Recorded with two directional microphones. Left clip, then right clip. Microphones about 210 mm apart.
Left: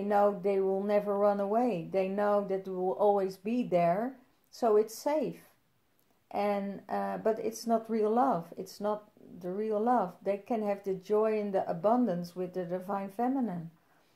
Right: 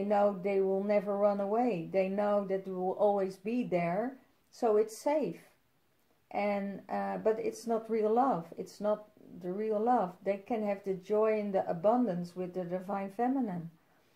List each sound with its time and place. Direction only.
0.0 s speech: 30° left (ahead or behind)